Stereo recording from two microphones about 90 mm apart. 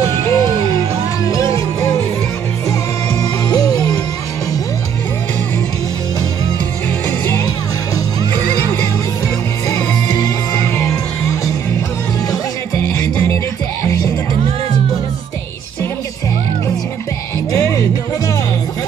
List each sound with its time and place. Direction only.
0.0 s music: 35° left (ahead or behind)
3.2 s music: 45° left (ahead or behind)
9.8 s music: 45° left (ahead or behind)
10.8 s music: 30° left (ahead or behind)
17.5 s music: 40° left (ahead or behind)